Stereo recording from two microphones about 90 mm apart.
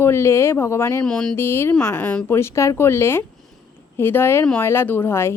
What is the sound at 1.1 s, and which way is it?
Speech, 10° left (ahead or behind).